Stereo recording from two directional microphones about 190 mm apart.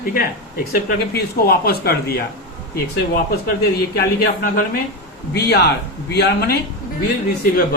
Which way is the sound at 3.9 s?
50° left (ahead or behind).